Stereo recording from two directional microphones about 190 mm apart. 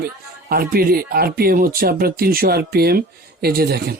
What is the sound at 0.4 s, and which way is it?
A man's voice, 55° right (ahead or behind).